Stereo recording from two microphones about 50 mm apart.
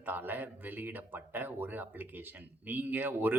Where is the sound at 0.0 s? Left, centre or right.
Right.